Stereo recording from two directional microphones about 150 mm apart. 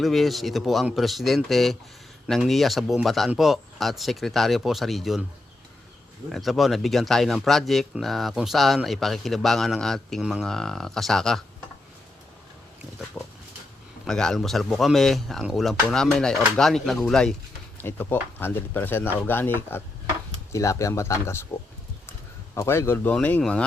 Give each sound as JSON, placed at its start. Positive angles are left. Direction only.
{"t": 0.0, "sound": "speech", "side_deg": 0}
{"t": 6.3, "sound": "speech", "side_deg": 0}
{"t": 13.2, "sound": "speech", "side_deg": 5}
{"t": 17.7, "sound": "speech", "side_deg": 15}
{"t": 22.5, "sound": "speech", "side_deg": 20}